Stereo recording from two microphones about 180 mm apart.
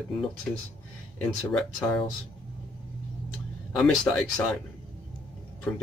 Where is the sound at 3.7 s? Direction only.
5° left (ahead or behind).